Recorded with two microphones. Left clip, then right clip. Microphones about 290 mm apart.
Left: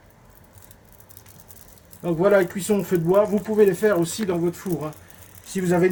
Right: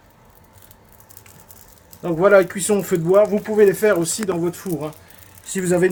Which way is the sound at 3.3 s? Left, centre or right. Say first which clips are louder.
Right 3 dB; centre.